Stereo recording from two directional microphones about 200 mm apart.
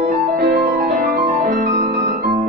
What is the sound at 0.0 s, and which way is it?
Music, 45° right (ahead or behind).